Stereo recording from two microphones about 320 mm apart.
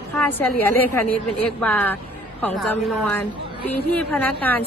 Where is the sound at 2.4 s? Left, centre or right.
Centre.